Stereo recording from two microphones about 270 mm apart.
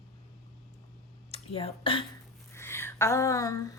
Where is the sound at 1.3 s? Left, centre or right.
Left.